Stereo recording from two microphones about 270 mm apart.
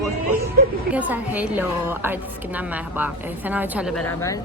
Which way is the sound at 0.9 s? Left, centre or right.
Centre.